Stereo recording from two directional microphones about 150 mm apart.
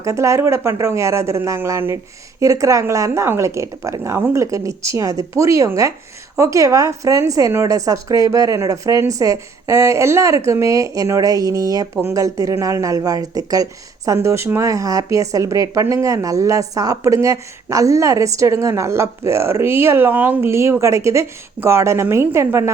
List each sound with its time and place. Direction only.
0.0 s a woman's voice: 20° right (ahead or behind)